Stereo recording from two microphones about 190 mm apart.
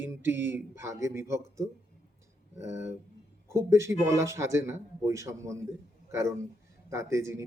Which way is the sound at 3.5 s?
15° right (ahead or behind).